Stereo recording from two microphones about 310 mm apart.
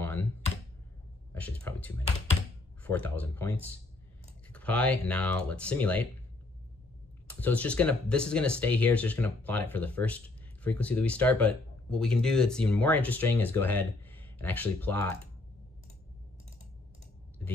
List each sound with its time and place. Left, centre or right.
0.0 s computer keyboard: centre
1.3 s a sound: centre
2.8 s speech: centre
7.3 s speech: centre